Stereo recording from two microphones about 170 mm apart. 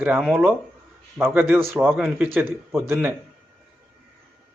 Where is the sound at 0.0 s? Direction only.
5° right (ahead or behind).